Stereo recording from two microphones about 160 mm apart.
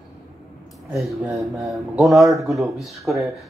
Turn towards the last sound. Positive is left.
turn(degrees=0)  # may be behind; listen again after turning